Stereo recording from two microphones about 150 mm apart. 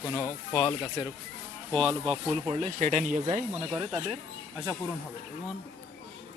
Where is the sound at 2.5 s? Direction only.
55° right (ahead or behind).